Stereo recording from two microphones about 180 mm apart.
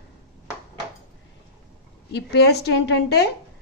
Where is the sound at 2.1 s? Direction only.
65° left (ahead or behind).